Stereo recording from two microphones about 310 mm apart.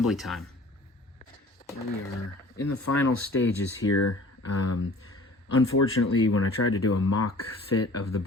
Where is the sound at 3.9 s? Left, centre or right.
Left.